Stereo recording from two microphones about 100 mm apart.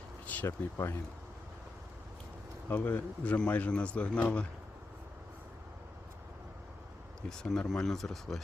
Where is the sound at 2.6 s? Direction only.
20° left (ahead or behind).